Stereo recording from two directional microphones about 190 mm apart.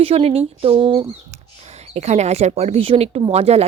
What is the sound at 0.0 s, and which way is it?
Speech, 30° right (ahead or behind).